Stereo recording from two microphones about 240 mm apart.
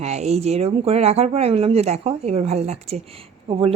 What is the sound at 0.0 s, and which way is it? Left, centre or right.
Speech, right.